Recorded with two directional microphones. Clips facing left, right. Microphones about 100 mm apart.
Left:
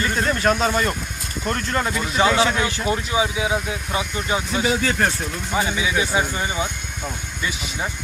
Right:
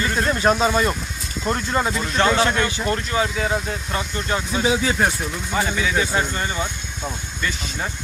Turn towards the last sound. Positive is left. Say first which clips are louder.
# even
turn(degrees=10)  # may be behind; listen again after turning